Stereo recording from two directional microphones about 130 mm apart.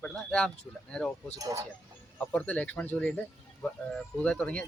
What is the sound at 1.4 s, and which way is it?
Speech, 25° right (ahead or behind).